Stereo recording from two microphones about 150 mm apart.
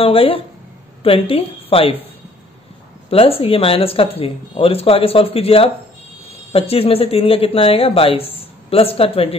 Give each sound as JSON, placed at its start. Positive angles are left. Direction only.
{"t": 0.0, "sound": "a woman's voice", "side_deg": 40}
{"t": 3.1, "sound": "speech", "side_deg": 40}